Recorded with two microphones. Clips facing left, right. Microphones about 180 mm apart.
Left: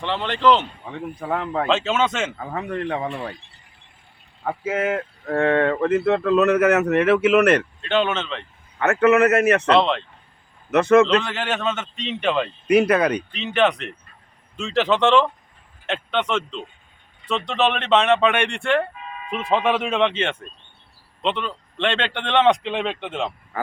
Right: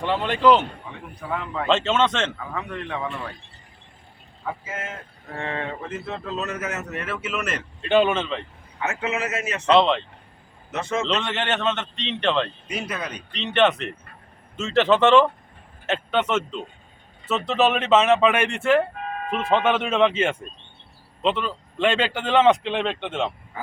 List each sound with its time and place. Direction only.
0.0 s speech: 10° right (ahead or behind)
1.2 s a man's voice: 50° left (ahead or behind)
1.6 s a man's voice: 5° left (ahead or behind)
2.4 s speech: 40° left (ahead or behind)
4.4 s speech: 60° left (ahead or behind)
7.8 s speech: 10° right (ahead or behind)
8.8 s a man's voice: 65° left (ahead or behind)
9.6 s a man's voice: centre (ahead or behind)
10.7 s a man's voice: 65° left (ahead or behind)
11.0 s a man's voice: centre (ahead or behind)
12.6 s speech: 65° left (ahead or behind)
13.3 s a man's voice: centre (ahead or behind)
18.9 s music: 55° right (ahead or behind)
19.3 s a man's voice: centre (ahead or behind)